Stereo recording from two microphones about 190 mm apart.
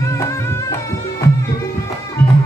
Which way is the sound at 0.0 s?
15° left (ahead or behind).